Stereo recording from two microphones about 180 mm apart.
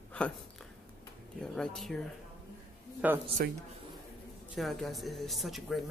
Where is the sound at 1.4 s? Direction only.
5° left (ahead or behind).